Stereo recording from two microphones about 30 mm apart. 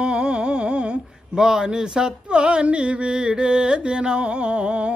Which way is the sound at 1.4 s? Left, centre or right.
Right.